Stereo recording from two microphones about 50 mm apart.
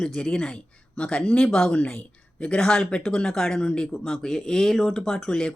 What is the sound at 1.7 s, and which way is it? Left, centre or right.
A woman's voice, left.